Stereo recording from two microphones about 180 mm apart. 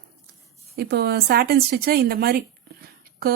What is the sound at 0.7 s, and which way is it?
Speech, 60° right (ahead or behind).